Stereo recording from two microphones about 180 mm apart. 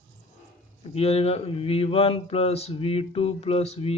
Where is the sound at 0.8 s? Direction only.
35° left (ahead or behind).